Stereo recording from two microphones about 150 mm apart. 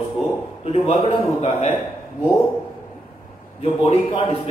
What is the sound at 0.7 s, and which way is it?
A man's voice, 40° left (ahead or behind).